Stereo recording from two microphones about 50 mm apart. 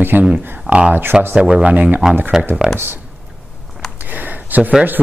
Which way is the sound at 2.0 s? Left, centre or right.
Centre.